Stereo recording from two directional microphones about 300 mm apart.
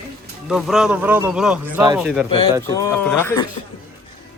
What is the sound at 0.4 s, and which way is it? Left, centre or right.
Speech, centre.